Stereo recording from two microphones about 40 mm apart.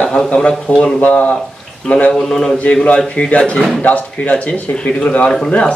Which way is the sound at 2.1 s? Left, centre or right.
Centre.